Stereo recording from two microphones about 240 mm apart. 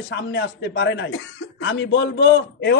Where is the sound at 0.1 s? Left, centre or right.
Left.